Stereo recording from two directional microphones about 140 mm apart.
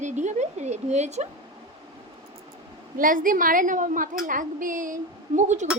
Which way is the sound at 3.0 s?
75° right (ahead or behind).